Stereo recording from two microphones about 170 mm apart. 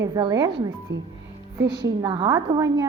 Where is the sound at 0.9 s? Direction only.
90° right.